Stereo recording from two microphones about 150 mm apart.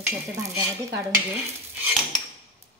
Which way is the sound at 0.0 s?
15° right (ahead or behind).